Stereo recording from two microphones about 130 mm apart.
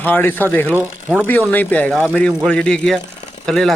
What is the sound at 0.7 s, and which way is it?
Speech, 15° right (ahead or behind).